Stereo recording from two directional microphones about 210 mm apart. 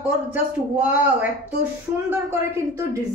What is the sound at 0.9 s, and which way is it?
Speech, 5° right (ahead or behind).